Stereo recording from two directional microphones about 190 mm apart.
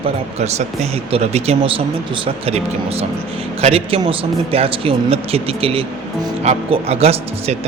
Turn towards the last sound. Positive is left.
turn(degrees=-30)  # may be behind; listen again after turning